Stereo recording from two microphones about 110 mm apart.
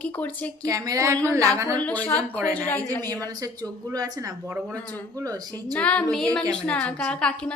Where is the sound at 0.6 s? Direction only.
30° right (ahead or behind).